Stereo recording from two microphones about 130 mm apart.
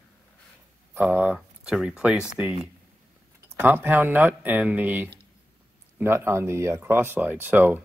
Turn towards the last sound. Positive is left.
turn(degrees=-15)  # may be behind; listen again after turning